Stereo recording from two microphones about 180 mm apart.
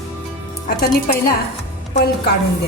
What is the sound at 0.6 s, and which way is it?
Speech, 50° left (ahead or behind).